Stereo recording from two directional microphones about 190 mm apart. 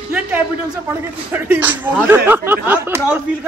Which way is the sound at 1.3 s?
10° right (ahead or behind).